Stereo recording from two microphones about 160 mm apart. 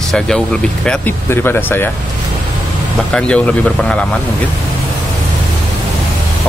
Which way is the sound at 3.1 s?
5° left (ahead or behind).